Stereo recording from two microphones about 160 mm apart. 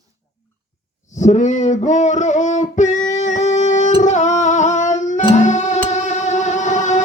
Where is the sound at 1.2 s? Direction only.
45° left (ahead or behind).